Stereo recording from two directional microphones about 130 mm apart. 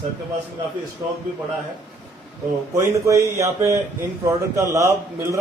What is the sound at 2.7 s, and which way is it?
A man's voice, 25° right (ahead or behind).